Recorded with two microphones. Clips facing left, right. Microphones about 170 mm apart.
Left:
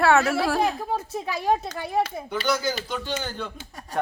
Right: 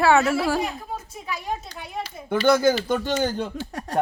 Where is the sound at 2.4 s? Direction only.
50° right (ahead or behind).